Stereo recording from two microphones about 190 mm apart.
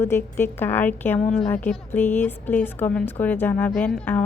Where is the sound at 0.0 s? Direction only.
10° left (ahead or behind).